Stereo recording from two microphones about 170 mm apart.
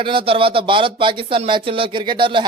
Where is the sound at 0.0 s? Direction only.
30° right (ahead or behind).